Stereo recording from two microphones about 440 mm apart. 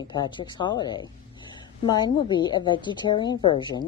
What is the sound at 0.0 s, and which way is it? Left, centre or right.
A woman's voice, centre.